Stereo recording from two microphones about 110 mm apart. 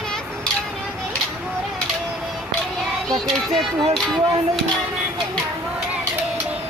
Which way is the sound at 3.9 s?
Centre (ahead or behind).